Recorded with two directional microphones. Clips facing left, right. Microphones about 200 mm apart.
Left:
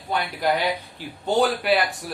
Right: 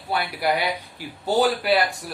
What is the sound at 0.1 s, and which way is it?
A man's voice, 10° right (ahead or behind).